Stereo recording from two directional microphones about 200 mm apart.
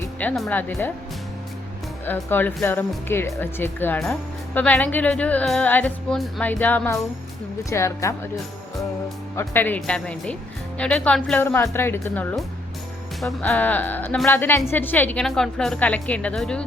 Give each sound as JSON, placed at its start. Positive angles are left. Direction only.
{"t": 0.2, "sound": "speech", "side_deg": 5}
{"t": 2.0, "sound": "speech", "side_deg": 10}
{"t": 9.3, "sound": "a woman's voice", "side_deg": 10}